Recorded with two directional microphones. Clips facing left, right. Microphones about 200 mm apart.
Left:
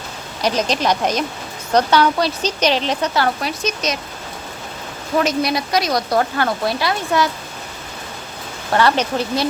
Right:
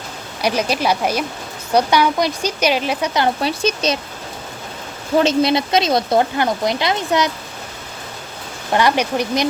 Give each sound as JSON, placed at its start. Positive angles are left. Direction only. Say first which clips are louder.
{"t": 0.4, "sound": "speech", "louder": "even", "side_deg": -10}
{"t": 3.4, "sound": "speech", "louder": "right 4 dB", "side_deg": -30}
{"t": 5.1, "sound": "speech", "louder": "right 3 dB", "side_deg": -25}
{"t": 8.7, "sound": "speech", "louder": "even", "side_deg": -15}